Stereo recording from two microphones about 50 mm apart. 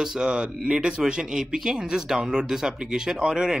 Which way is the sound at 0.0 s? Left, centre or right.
Centre.